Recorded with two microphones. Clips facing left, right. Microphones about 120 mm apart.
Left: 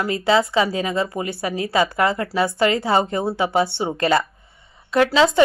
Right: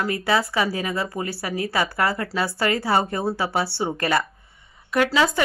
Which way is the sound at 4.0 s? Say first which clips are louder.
Left 6 dB; 25° left (ahead or behind).